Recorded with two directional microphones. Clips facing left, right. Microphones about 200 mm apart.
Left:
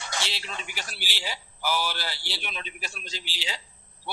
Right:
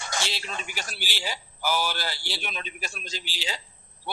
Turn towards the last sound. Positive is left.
turn(degrees=-45)  # may be behind; listen again after turning